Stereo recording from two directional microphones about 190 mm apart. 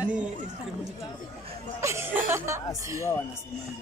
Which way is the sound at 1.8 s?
15° right (ahead or behind).